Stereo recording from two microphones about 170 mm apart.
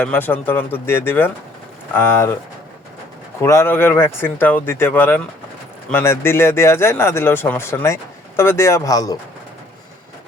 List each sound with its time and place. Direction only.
0.0 s a man's voice: 10° left (ahead or behind)
3.4 s a man's voice: 15° left (ahead or behind)